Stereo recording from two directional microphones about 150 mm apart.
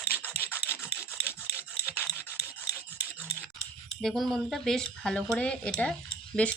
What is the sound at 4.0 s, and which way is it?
Speech, centre (ahead or behind).